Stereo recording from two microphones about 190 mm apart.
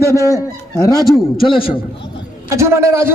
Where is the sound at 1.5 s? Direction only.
30° left (ahead or behind).